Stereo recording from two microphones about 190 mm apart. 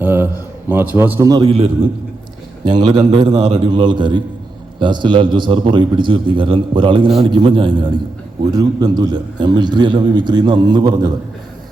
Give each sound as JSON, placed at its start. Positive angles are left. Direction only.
{"t": 0.0, "sound": "a man's voice", "side_deg": -10}